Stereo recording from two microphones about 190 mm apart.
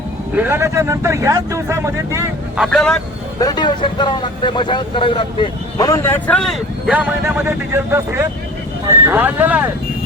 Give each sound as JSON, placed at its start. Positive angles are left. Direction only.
{"t": 0.3, "sound": "speech", "side_deg": -10}
{"t": 2.6, "sound": "speech", "side_deg": 0}
{"t": 3.4, "sound": "speech", "side_deg": 20}